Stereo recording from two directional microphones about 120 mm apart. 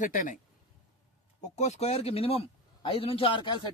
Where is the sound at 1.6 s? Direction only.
65° left (ahead or behind); by 3.7 s 45° left (ahead or behind).